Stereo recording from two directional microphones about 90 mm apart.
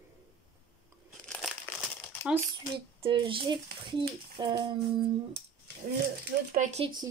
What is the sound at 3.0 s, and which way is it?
Speech, 75° right (ahead or behind).